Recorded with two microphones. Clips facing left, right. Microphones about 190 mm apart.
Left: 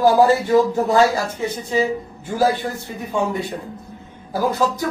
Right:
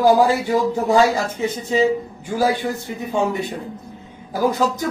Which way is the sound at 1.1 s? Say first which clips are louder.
Right 1 dB; 20° right (ahead or behind).